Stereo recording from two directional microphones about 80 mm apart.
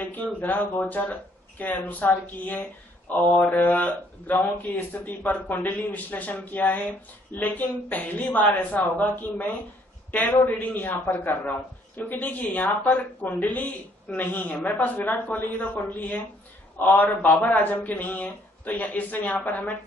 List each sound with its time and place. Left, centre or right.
0.0 s speech: left